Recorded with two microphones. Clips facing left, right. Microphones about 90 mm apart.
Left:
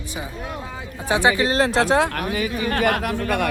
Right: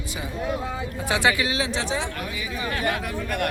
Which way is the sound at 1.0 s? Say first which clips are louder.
Left 4 dB; 20° left (ahead or behind).